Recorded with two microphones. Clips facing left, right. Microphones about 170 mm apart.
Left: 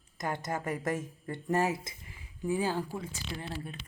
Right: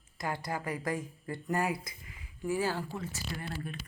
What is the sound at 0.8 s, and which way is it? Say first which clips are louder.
A woman's voice: left 2 dB; 25° left (ahead or behind).